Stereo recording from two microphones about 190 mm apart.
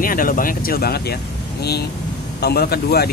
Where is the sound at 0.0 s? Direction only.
45° left (ahead or behind).